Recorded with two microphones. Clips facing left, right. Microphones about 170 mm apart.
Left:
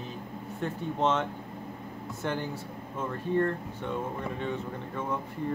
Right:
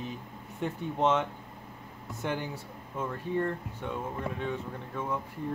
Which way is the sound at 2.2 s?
10° right (ahead or behind).